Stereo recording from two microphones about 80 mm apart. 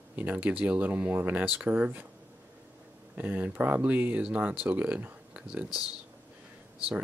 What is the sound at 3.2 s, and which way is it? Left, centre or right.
Speech, right.